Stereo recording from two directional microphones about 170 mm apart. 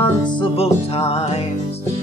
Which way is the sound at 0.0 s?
30° left (ahead or behind).